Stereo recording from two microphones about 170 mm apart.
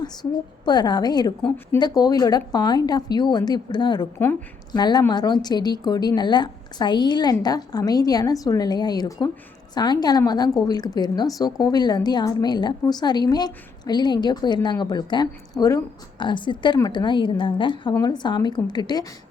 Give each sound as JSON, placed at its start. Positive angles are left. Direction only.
{"t": 0.0, "sound": "a woman's voice", "side_deg": 25}
{"t": 1.4, "sound": "a woman's voice", "side_deg": 5}
{"t": 1.8, "sound": "a woman's voice", "side_deg": 20}
{"t": 4.2, "sound": "a woman's voice", "side_deg": 10}
{"t": 4.7, "sound": "a woman's voice", "side_deg": 25}